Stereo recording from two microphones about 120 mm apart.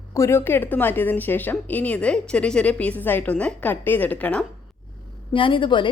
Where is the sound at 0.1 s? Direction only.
25° left (ahead or behind).